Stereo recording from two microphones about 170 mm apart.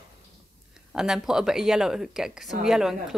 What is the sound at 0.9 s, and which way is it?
A woman's voice, centre (ahead or behind).